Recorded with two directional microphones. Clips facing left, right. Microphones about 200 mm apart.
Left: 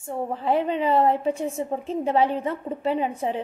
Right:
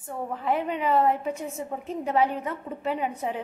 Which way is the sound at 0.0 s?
25° left (ahead or behind).